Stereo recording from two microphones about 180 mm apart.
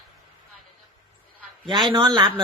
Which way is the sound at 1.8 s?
25° right (ahead or behind).